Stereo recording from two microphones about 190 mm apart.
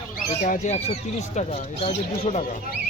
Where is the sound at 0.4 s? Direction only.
40° left (ahead or behind).